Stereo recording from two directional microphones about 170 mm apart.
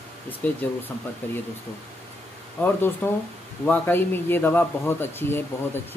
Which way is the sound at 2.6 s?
10° left (ahead or behind).